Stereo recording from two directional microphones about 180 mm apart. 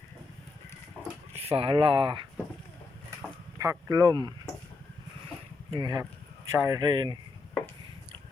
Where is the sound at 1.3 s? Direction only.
35° right (ahead or behind).